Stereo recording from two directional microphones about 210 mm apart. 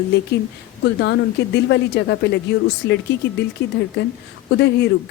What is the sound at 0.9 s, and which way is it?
Speech, 55° left (ahead or behind).